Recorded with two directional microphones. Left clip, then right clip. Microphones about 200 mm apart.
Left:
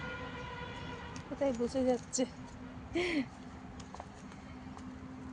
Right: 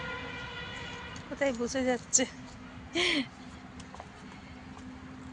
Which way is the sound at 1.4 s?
5° right (ahead or behind).